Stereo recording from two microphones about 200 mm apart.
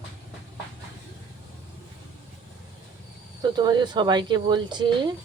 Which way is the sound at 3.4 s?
20° right (ahead or behind).